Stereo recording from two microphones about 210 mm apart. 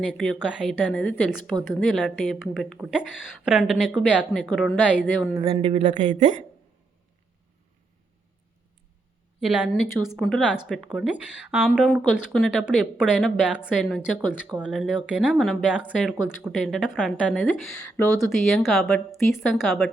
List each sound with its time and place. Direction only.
0.0 s speech: centre (ahead or behind)
5.4 s a woman's voice: 25° right (ahead or behind)
9.5 s speech: 5° right (ahead or behind)